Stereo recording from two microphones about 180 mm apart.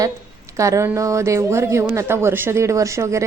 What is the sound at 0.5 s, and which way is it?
Speech, 15° right (ahead or behind).